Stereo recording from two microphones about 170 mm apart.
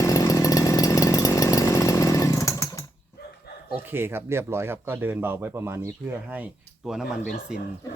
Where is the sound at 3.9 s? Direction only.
15° right (ahead or behind).